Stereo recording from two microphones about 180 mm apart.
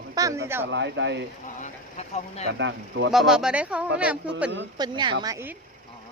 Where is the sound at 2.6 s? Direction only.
90° right.